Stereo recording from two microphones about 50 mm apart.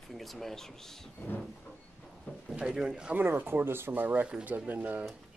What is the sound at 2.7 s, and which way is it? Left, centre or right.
Speech, centre.